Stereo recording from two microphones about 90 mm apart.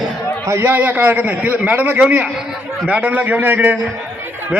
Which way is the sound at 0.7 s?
15° right (ahead or behind).